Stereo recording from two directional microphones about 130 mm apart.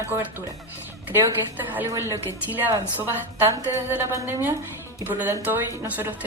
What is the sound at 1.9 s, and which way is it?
Speech, 25° right (ahead or behind).